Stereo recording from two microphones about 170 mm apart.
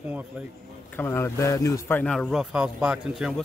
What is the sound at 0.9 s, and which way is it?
Speech, 15° left (ahead or behind).